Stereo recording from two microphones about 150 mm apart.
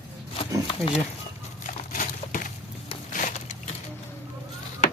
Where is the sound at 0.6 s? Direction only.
40° left (ahead or behind).